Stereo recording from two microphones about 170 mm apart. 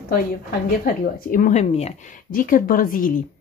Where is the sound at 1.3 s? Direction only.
45° left (ahead or behind).